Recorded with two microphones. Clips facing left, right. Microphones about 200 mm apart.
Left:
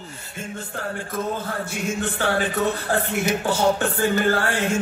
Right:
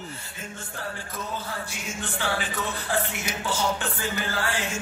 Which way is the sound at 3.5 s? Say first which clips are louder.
Left 5 dB; 55° left (ahead or behind).